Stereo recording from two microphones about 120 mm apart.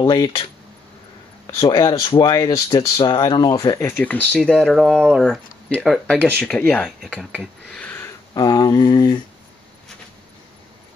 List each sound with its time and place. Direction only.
0.0 s speech: 30° left (ahead or behind)
1.5 s speech: 30° left (ahead or behind)
4.0 s speech: 15° left (ahead or behind)
4.6 s speech: 5° right (ahead or behind)
5.7 s speech: 5° left (ahead or behind)
7.0 s speech: 5° right (ahead or behind)
7.6 s a sound: 10° left (ahead or behind)
8.4 s speech: 35° left (ahead or behind)